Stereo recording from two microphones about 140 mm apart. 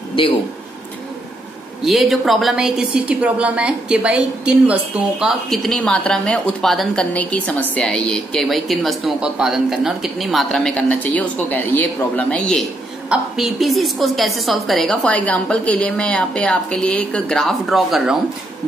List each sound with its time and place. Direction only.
0.2 s speech: 35° left (ahead or behind)
1.8 s speech: centre (ahead or behind)